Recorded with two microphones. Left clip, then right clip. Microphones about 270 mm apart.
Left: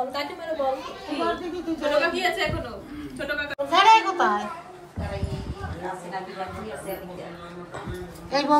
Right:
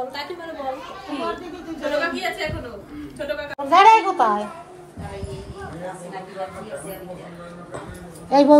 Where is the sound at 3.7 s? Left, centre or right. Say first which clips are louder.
Right 4 dB; right.